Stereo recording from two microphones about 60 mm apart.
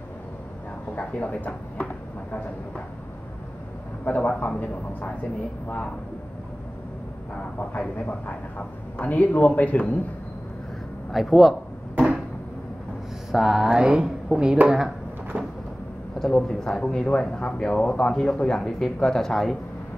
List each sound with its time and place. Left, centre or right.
0.9 s speech: left
4.0 s a man's voice: left
7.7 s a man's voice: centre
11.1 s a man's voice: centre
13.3 s speech: centre
15.3 s a sound: right
16.2 s speech: centre